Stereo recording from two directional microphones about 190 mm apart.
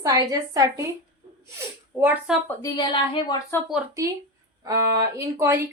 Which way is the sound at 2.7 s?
25° left (ahead or behind).